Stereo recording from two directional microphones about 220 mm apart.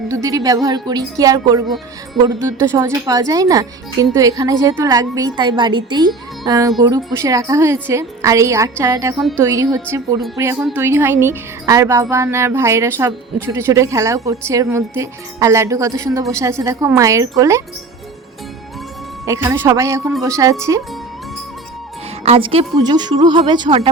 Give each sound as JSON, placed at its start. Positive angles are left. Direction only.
{"t": 0.1, "sound": "speech", "side_deg": -15}
{"t": 9.1, "sound": "speech", "side_deg": 0}
{"t": 9.4, "sound": "speech", "side_deg": -15}
{"t": 19.2, "sound": "speech", "side_deg": -15}
{"t": 22.2, "sound": "a woman's voice", "side_deg": -25}